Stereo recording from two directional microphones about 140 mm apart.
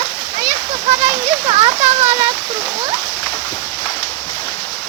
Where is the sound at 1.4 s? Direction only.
40° right (ahead or behind).